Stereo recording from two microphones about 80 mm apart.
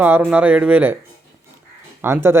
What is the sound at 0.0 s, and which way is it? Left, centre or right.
Speech, right.